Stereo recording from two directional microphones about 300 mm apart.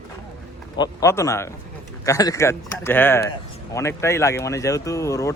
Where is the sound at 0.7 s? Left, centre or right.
Centre.